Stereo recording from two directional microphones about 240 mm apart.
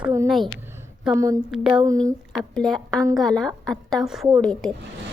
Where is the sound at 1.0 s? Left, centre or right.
Centre.